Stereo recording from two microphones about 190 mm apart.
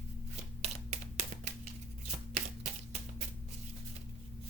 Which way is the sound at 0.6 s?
35° right (ahead or behind).